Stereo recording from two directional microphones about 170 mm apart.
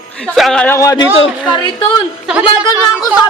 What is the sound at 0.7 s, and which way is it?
Speech, 20° left (ahead or behind).